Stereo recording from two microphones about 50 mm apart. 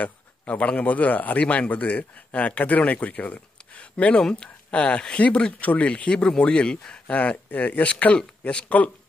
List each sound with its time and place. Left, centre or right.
0.0 s speech: left